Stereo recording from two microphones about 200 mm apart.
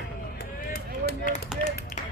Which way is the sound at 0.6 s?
45° left (ahead or behind).